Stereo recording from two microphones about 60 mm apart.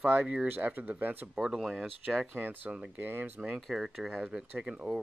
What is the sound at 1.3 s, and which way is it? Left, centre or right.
Speech, centre.